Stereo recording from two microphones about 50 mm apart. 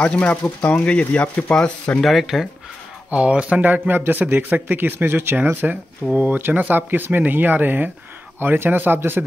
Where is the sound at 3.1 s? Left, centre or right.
Right.